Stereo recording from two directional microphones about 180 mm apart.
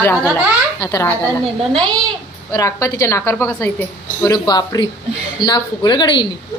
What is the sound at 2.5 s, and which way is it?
A woman's voice, 20° left (ahead or behind).